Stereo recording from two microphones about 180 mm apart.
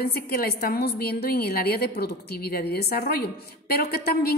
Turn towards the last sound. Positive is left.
turn(degrees=60)  # may be behind; listen again after turning